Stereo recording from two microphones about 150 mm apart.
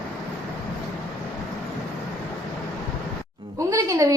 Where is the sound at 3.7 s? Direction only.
20° right (ahead or behind).